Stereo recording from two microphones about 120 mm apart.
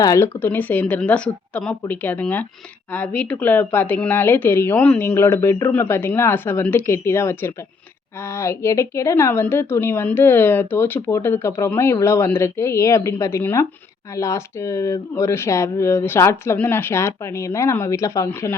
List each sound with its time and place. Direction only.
0.0 s a woman's voice: 25° left (ahead or behind)
0.3 s a woman's voice: 15° left (ahead or behind)